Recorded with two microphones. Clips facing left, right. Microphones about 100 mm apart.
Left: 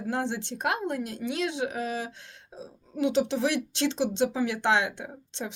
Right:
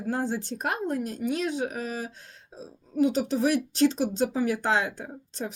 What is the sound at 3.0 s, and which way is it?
Speech, 40° right (ahead or behind).